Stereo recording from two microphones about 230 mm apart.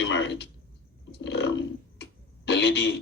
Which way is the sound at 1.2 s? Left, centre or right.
Left.